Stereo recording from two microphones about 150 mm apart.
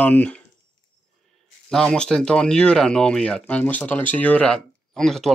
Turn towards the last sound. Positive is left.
turn(degrees=0)  # may be behind; listen again after turning